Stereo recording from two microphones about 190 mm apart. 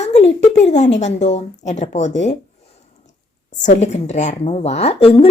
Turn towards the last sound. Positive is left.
turn(degrees=30)  # may be behind; listen again after turning